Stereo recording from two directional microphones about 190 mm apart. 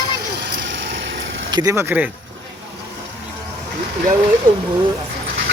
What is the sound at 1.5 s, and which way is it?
Speech, 20° right (ahead or behind).